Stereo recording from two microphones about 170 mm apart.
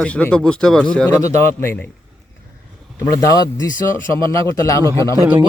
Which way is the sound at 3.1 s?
20° left (ahead or behind).